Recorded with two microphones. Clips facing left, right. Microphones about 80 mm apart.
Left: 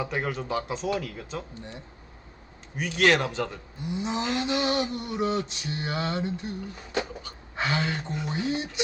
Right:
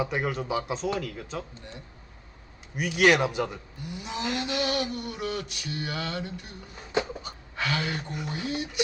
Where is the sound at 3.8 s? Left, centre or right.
Left.